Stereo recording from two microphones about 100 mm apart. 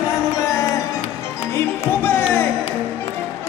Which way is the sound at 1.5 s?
25° left (ahead or behind).